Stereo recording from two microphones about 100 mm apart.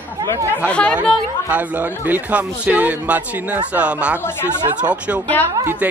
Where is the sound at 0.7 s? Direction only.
15° left (ahead or behind).